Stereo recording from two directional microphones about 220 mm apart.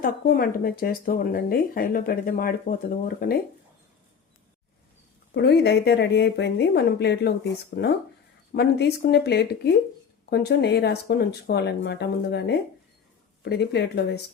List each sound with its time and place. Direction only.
0.0 s speech: 40° left (ahead or behind)
5.3 s speech: 50° left (ahead or behind)
8.5 s speech: 50° left (ahead or behind)